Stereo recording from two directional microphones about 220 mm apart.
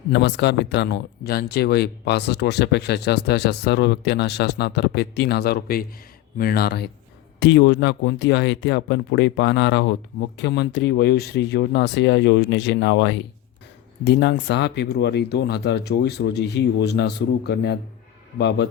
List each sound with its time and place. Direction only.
0.1 s speech: 50° left (ahead or behind)